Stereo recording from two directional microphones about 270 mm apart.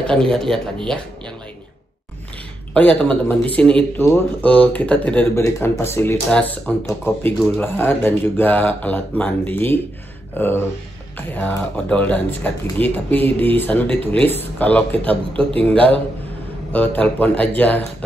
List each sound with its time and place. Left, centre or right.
0.0 s speech: centre
2.7 s speech: centre